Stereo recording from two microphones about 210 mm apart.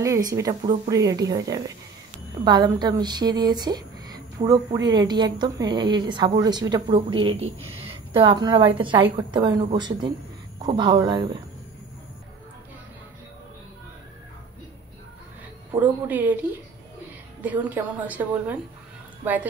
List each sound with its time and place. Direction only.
0.0 s a woman's voice: 15° right (ahead or behind)
15.7 s speech: 10° right (ahead or behind)